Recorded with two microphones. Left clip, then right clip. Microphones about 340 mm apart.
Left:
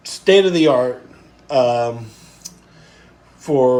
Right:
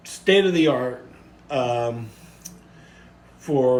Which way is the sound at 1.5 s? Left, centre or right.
Centre.